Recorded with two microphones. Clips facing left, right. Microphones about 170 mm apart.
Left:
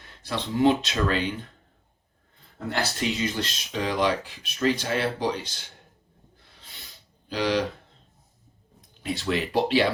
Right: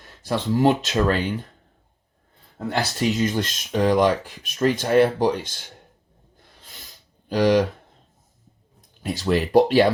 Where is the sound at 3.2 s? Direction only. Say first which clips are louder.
Right 6 dB; 45° right (ahead or behind).